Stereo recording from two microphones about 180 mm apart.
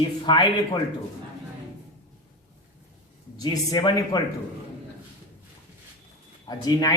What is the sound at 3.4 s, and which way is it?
Speech, 20° left (ahead or behind).